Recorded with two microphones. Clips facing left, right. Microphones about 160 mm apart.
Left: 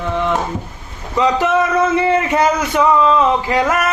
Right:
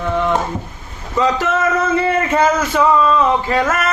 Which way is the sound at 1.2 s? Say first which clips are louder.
Left 2 dB; 15° left (ahead or behind).